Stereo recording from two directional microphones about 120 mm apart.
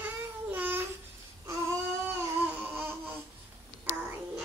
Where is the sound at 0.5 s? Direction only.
15° right (ahead or behind).